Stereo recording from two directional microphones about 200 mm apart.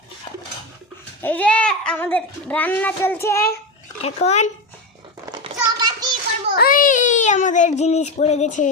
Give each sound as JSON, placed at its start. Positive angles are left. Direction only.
{"t": 1.2, "sound": "a child's voice", "side_deg": 10}
{"t": 4.0, "sound": "speech", "side_deg": 35}
{"t": 5.2, "sound": "a sound", "side_deg": -20}
{"t": 6.6, "sound": "child singing", "side_deg": 45}